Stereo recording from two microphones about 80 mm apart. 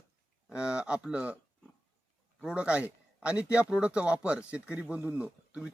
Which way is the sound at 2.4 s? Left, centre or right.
Centre.